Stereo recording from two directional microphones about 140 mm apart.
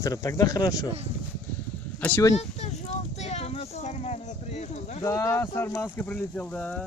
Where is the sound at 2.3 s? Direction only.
50° left (ahead or behind).